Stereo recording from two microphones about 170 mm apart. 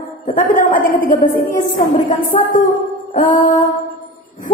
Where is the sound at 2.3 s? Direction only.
40° left (ahead or behind).